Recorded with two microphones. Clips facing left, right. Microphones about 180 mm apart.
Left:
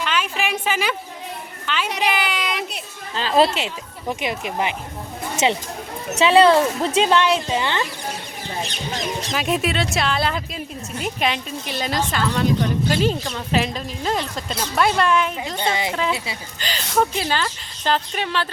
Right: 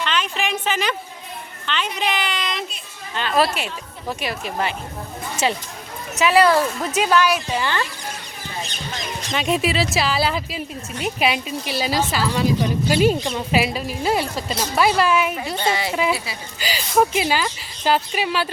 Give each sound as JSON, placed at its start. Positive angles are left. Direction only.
{"t": 0.0, "sound": "a sound", "side_deg": 5}
{"t": 3.2, "sound": "speech", "side_deg": 25}
{"t": 9.3, "sound": "a woman's voice", "side_deg": 0}
{"t": 16.1, "sound": "speech", "side_deg": 25}
{"t": 16.6, "sound": "a woman's voice", "side_deg": -10}